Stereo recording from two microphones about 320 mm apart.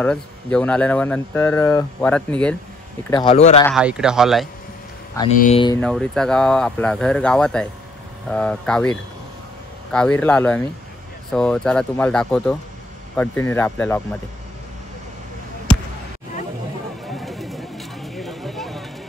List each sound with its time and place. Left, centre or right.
0.0 s speech: centre
3.1 s speech: centre
3.6 s speech: centre
5.4 s speech: centre
5.8 s speech: centre
17.0 s a sound: centre